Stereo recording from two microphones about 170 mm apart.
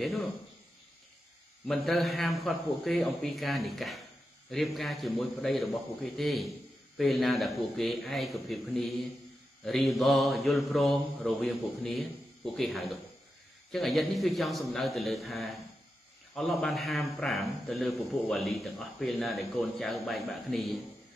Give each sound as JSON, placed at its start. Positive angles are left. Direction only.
{"t": 0.0, "sound": "a man's voice", "side_deg": 0}
{"t": 1.7, "sound": "a man's voice", "side_deg": 0}